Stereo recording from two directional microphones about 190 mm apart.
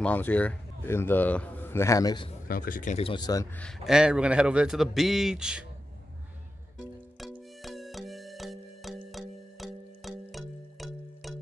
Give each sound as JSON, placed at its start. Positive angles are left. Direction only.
{"t": 0.0, "sound": "a man's voice", "side_deg": 10}
{"t": 2.4, "sound": "speech", "side_deg": 50}
{"t": 3.5, "sound": "a man's voice", "side_deg": 0}
{"t": 7.2, "sound": "music", "side_deg": 0}